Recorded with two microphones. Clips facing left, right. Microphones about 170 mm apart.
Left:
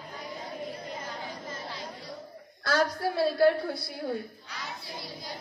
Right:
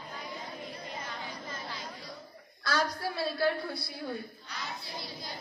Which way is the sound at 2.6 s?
50° left (ahead or behind).